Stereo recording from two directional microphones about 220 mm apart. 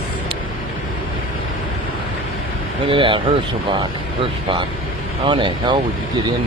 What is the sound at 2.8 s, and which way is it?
Speech, 25° right (ahead or behind).